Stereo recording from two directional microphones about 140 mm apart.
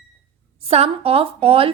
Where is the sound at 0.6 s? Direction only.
45° right (ahead or behind).